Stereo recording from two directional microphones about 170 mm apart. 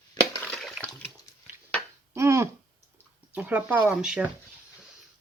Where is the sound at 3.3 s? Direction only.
10° right (ahead or behind).